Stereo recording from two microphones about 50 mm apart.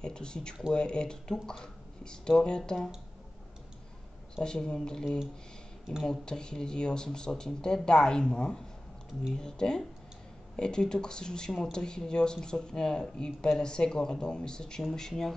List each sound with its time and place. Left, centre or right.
0.0 s speech: centre
4.4 s speech: centre